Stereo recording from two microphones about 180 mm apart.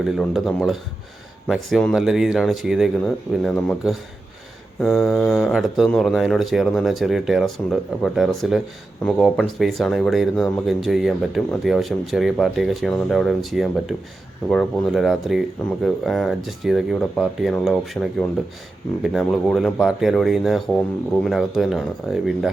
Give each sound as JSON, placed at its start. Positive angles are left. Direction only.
{"t": 0.0, "sound": "speech", "side_deg": 0}
{"t": 5.0, "sound": "speech", "side_deg": 0}